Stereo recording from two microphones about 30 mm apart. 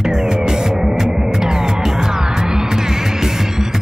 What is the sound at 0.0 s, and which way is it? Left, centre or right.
Music, centre.